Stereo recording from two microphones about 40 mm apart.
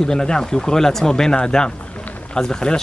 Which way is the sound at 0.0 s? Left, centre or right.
Centre.